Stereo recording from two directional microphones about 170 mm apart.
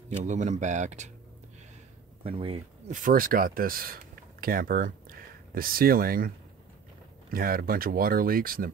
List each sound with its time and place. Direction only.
0.1 s speech: 45° right (ahead or behind)
2.2 s speech: 35° right (ahead or behind)
2.9 s speech: 55° right (ahead or behind)